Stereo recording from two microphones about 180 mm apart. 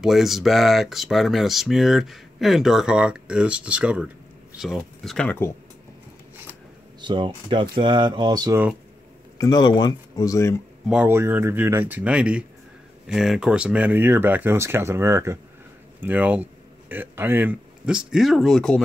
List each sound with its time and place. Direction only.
0.0 s speech: centre (ahead or behind)
7.0 s speech: 25° right (ahead or behind)
9.4 s speech: 20° left (ahead or behind)
10.9 s speech: 10° right (ahead or behind)